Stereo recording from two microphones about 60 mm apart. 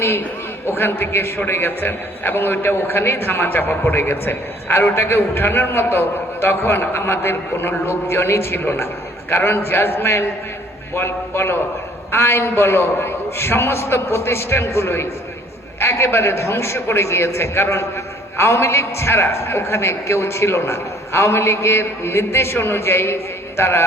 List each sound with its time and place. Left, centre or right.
0.0 s a man's voice: left